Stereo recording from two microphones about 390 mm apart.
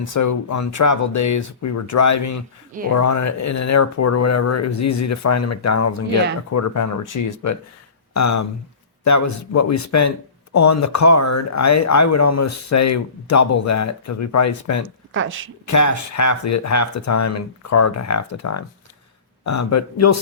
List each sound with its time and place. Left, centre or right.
0.0 s speech: left
14.8 s speech: right
15.6 s speech: left